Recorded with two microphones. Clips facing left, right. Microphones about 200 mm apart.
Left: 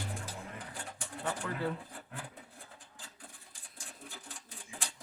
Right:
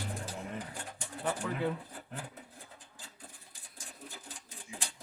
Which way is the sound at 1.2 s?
5° right (ahead or behind).